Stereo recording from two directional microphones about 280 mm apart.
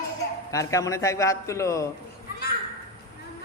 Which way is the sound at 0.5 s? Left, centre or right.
Centre.